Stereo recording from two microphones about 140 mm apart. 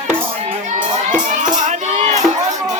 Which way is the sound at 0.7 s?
65° right (ahead or behind).